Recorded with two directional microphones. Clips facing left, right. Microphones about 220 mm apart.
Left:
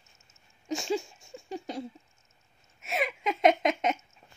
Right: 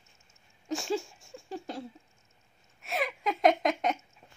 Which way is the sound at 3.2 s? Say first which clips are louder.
Left 1 dB; 20° left (ahead or behind).